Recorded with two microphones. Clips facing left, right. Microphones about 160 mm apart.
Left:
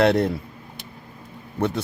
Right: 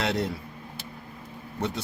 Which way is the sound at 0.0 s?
55° left (ahead or behind).